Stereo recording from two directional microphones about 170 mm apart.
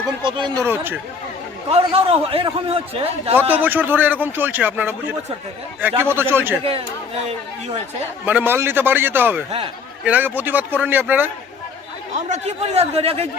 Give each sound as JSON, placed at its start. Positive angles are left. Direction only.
{"t": 0.2, "sound": "speech", "side_deg": -30}
{"t": 0.6, "sound": "speech", "side_deg": -15}
{"t": 1.7, "sound": "a man's voice", "side_deg": -35}
{"t": 3.5, "sound": "speech", "side_deg": -10}
{"t": 6.7, "sound": "a man's voice", "side_deg": -35}
{"t": 8.2, "sound": "speech", "side_deg": -10}
{"t": 12.3, "sound": "a man's voice", "side_deg": -40}